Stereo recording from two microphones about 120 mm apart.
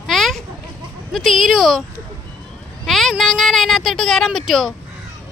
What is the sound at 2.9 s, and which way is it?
Speech, centre (ahead or behind).